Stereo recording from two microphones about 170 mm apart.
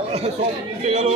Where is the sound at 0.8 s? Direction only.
40° right (ahead or behind).